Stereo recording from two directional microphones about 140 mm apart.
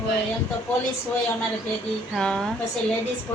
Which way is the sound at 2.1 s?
5° left (ahead or behind).